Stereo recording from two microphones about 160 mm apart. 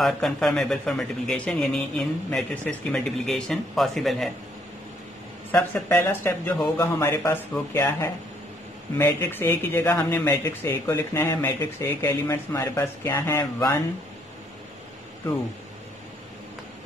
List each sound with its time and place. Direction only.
0.0 s speech: centre (ahead or behind)
5.5 s speech: 15° left (ahead or behind)